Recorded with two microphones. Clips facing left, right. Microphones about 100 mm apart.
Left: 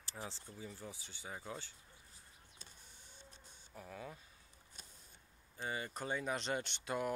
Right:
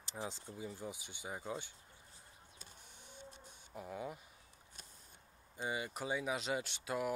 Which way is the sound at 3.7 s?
15° right (ahead or behind).